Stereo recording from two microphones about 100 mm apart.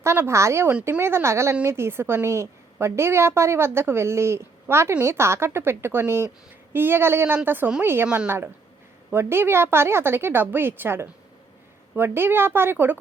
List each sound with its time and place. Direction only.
0.0 s a woman's voice: 25° right (ahead or behind)
8.0 s a woman's voice: 10° right (ahead or behind)
9.1 s a woman's voice: 25° right (ahead or behind)